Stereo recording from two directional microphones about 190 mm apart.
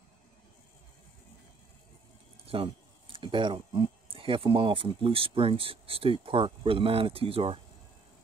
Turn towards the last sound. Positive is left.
turn(degrees=-30)  # may be behind; listen again after turning